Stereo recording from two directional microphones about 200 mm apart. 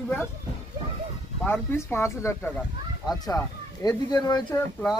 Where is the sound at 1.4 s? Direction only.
10° left (ahead or behind).